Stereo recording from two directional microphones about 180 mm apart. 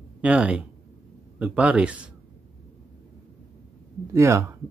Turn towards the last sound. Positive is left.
turn(degrees=-15)  # may be behind; listen again after turning